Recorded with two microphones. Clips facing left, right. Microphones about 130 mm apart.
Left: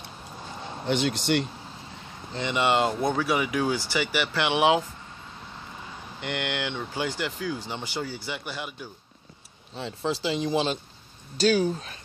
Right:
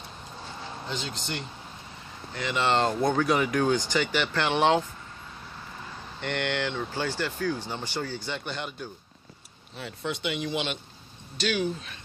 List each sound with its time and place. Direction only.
0.8 s speech: 70° left (ahead or behind)
2.3 s speech: 20° left (ahead or behind)
6.2 s speech: 15° left (ahead or behind)
9.8 s speech: 30° left (ahead or behind)